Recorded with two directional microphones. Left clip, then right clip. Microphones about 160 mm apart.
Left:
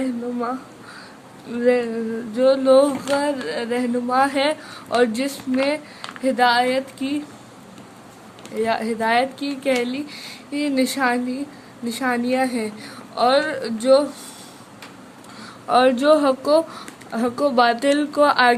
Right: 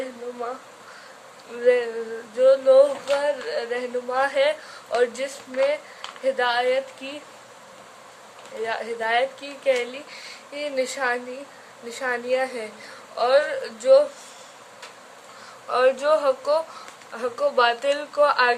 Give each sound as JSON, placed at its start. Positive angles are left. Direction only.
{"t": 1.5, "sound": "a sound", "side_deg": 25}
{"t": 2.3, "sound": "a woman's voice", "side_deg": 30}
{"t": 8.6, "sound": "a woman's voice", "side_deg": 40}
{"t": 15.7, "sound": "a woman's voice", "side_deg": 35}